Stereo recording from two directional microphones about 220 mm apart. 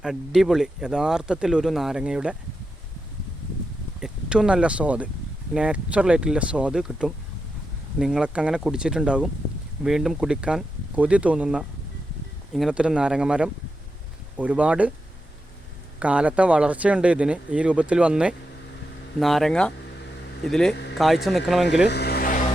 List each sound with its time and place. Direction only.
0.0 s speech: centre (ahead or behind)
4.0 s speech: 5° right (ahead or behind)
16.0 s speech: 5° right (ahead or behind)
21.8 s vehicle: 50° left (ahead or behind)